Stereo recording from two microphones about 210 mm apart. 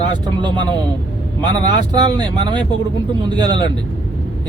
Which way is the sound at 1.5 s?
20° right (ahead or behind).